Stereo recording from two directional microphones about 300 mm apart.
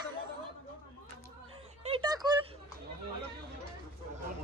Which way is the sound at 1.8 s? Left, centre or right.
Centre.